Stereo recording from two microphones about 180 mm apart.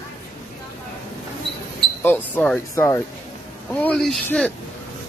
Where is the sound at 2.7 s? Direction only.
15° left (ahead or behind).